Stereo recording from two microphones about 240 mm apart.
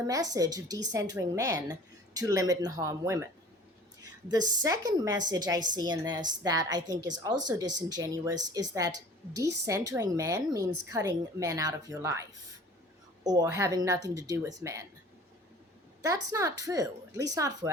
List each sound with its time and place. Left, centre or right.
0.1 s a woman's voice: centre
16.3 s a woman's voice: centre